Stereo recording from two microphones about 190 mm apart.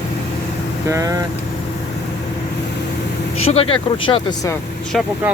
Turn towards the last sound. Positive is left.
turn(degrees=0)  # may be behind; listen again after turning